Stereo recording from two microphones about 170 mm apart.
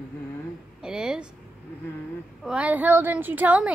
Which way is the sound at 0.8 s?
5° right (ahead or behind).